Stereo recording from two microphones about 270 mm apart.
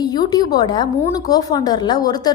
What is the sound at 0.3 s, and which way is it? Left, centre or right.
A woman's voice, centre.